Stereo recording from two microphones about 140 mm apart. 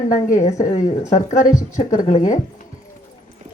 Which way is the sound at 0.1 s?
65° left (ahead or behind).